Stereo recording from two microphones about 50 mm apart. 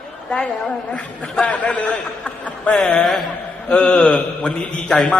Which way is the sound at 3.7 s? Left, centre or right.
Centre.